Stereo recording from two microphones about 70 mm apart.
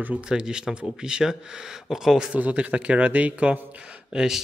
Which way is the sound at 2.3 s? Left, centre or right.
Right.